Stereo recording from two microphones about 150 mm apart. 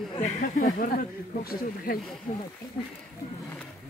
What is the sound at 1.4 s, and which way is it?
Speech, 80° left.